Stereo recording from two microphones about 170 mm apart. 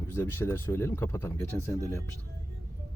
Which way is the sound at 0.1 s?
15° left (ahead or behind).